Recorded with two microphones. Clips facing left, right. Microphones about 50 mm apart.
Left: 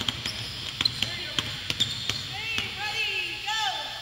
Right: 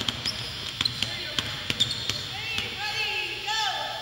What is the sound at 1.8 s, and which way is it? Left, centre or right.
Basketball bounce, left.